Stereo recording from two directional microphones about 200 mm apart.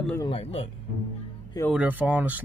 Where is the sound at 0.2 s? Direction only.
30° left (ahead or behind).